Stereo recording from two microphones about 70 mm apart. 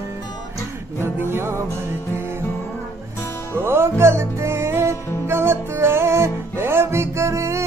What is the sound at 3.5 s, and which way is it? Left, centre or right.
Music, right.